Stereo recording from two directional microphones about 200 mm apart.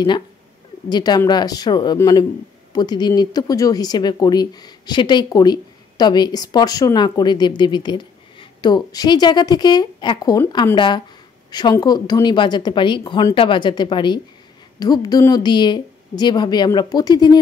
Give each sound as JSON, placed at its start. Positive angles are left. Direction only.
{"t": 0.8, "sound": "speech", "side_deg": 20}